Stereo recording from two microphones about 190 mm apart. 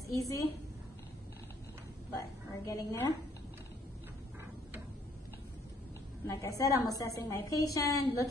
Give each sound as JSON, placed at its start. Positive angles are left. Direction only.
{"t": 0.1, "sound": "a woman's voice", "side_deg": 15}
{"t": 2.6, "sound": "a woman's voice", "side_deg": 20}
{"t": 6.2, "sound": "a woman's voice", "side_deg": 15}